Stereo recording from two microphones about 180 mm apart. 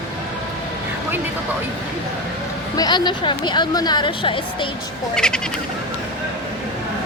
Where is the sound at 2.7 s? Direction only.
20° left (ahead or behind).